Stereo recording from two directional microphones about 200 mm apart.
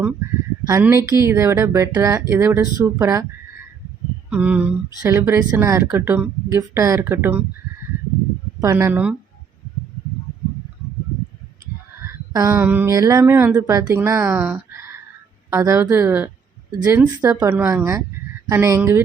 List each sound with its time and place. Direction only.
0.7 s speech: 10° right (ahead or behind)
4.3 s speech: 5° right (ahead or behind)
8.6 s speech: 10° right (ahead or behind)
12.3 s speech: 15° right (ahead or behind)